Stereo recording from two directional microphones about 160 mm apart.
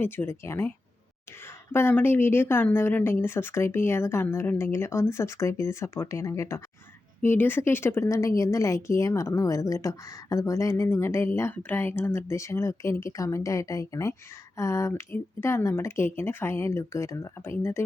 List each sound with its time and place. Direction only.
0.0 s speech: 15° left (ahead or behind)
1.7 s a woman's voice: 15° left (ahead or behind)